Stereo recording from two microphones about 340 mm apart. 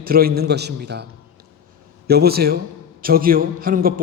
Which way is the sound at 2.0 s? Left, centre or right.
Right.